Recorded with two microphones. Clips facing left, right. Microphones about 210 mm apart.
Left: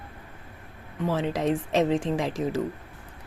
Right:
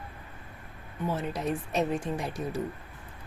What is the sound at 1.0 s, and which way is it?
A woman's voice, 90° left.